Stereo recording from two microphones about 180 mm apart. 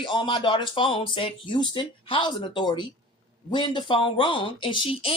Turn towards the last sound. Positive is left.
turn(degrees=30)  # may be behind; listen again after turning